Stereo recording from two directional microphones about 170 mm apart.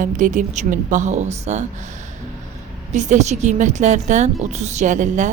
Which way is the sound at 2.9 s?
45° right (ahead or behind).